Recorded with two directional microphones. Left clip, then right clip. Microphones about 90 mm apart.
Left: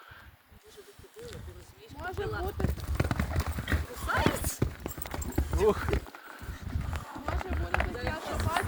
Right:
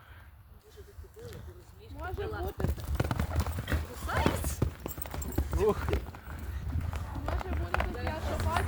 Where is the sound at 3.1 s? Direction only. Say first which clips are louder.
Left 2 dB; 20° right (ahead or behind).